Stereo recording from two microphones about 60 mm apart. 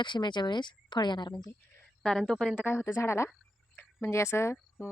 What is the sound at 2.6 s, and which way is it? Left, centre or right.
A woman's voice, left.